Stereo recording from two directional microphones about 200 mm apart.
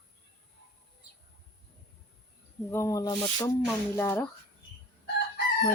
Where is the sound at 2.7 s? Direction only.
15° left (ahead or behind).